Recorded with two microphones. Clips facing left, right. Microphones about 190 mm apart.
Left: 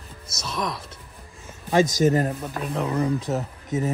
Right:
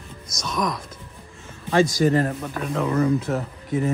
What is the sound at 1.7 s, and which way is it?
Speech, 15° left (ahead or behind).